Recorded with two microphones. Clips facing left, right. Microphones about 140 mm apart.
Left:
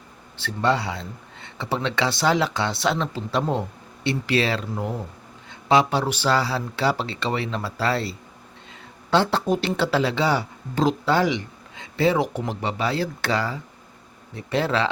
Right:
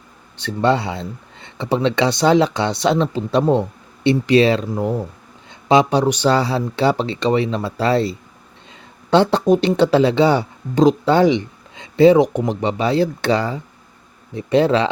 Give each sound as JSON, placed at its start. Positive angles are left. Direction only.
{"t": 0.3, "sound": "speech", "side_deg": -20}